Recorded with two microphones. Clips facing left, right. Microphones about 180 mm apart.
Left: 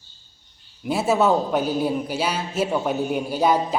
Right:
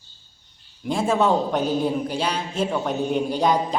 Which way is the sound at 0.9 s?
5° left (ahead or behind).